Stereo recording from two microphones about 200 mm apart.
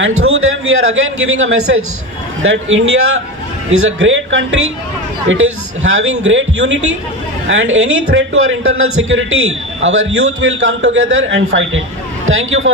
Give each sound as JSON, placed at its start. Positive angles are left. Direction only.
{"t": 0.0, "sound": "a man's voice", "side_deg": -90}
{"t": 5.9, "sound": "a man's voice", "side_deg": -90}
{"t": 6.2, "sound": "a man's voice", "side_deg": -70}